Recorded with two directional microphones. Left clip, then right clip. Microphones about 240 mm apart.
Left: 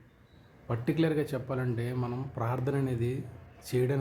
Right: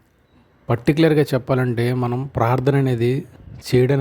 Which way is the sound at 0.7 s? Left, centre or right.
Right.